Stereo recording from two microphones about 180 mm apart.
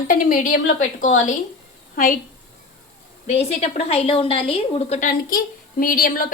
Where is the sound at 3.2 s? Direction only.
35° left (ahead or behind).